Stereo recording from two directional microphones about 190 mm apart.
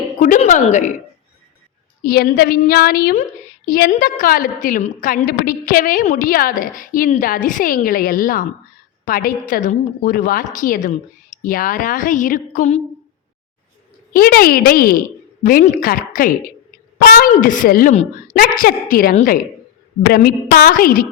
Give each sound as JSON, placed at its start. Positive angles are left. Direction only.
{"t": 0.2, "sound": "speech", "side_deg": 40}
{"t": 2.0, "sound": "a woman's voice", "side_deg": 50}
{"t": 14.1, "sound": "a woman's voice", "side_deg": 50}